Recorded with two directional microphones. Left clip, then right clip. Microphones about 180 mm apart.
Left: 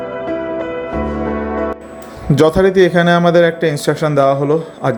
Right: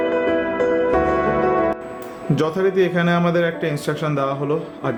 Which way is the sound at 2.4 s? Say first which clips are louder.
Left 8 dB; 30° left (ahead or behind).